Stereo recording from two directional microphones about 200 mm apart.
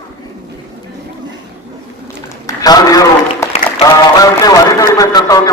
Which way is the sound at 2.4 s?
20° left (ahead or behind).